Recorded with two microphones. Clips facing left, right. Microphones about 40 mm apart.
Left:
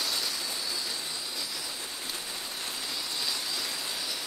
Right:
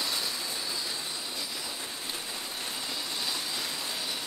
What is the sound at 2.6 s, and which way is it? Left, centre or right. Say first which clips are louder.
Vehicle: even; centre.